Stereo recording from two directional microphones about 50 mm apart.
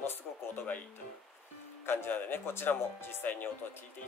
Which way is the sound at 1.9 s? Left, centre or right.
Left.